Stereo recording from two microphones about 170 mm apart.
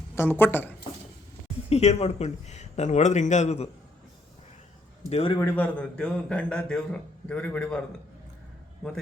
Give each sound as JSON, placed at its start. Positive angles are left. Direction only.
{"t": 0.2, "sound": "a man's voice", "side_deg": 10}
{"t": 1.7, "sound": "a man's voice", "side_deg": 40}
{"t": 5.0, "sound": "a man's voice", "side_deg": 35}
{"t": 5.4, "sound": "a man's voice", "side_deg": 10}
{"t": 8.8, "sound": "a man's voice", "side_deg": 5}